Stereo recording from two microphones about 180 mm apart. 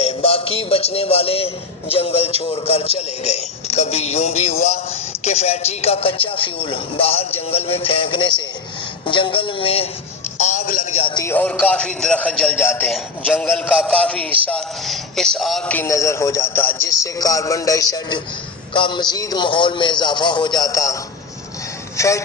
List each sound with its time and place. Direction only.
0.0 s music: 30° left (ahead or behind)
1.9 s a man's voice: 30° left (ahead or behind)
10.4 s music: 50° left (ahead or behind)
10.9 s speech: 30° left (ahead or behind)
11.2 s a man's voice: 10° left (ahead or behind)
21.9 s speech: 15° left (ahead or behind)